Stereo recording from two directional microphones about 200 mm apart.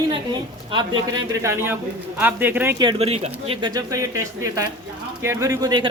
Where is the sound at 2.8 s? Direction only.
25° right (ahead or behind).